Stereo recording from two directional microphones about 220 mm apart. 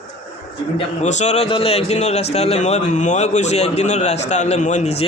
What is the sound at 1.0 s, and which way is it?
A man's voice, 30° left (ahead or behind).